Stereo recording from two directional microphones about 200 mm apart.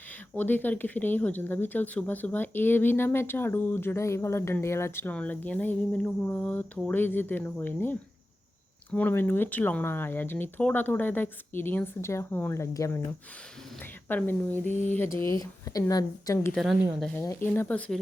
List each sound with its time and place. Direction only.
0.3 s speech: 10° left (ahead or behind)
14.1 s speech: 10° left (ahead or behind)